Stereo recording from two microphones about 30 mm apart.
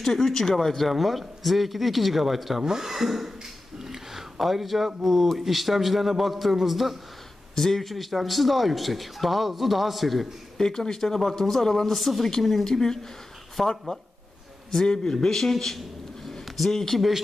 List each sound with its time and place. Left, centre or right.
0.0 s speech: centre
2.6 s speech: centre
2.9 s speech: centre
3.3 s a sound: centre
5.4 s speech: centre
7.5 s speech: centre
7.8 s speech: centre
10.6 s speech: centre
13.6 s speech: centre
14.7 s a man's voice: centre
16.4 s a sound: centre
16.7 s speech: centre